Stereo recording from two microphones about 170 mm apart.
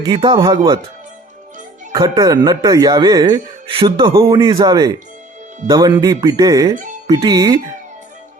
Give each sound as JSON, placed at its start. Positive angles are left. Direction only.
{"t": 0.0, "sound": "speech", "side_deg": -25}
{"t": 1.9, "sound": "speech", "side_deg": -25}